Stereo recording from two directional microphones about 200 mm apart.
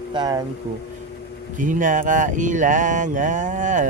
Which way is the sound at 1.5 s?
40° right (ahead or behind).